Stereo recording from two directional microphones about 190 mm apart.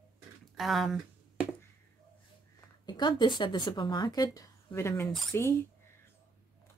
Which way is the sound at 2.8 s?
25° left (ahead or behind).